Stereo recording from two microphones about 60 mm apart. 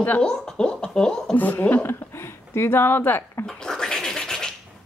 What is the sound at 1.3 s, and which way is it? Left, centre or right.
Speech, left.